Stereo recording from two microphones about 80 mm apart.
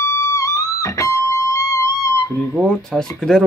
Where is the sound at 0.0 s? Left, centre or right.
Left.